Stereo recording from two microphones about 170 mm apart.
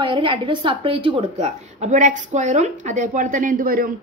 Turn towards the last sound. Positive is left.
turn(degrees=-55)  # may be behind; listen again after turning